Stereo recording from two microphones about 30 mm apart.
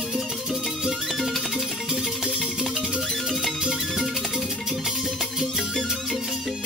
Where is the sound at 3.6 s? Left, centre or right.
Centre.